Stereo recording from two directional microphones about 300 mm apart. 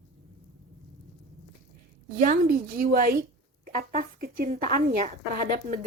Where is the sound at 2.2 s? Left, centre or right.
Right.